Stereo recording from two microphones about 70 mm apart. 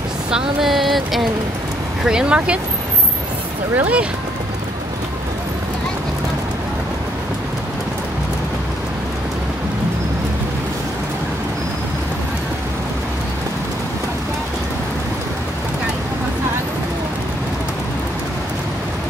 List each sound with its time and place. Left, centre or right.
0.3 s a sound: centre
2.0 s speech: centre
3.7 s speech: right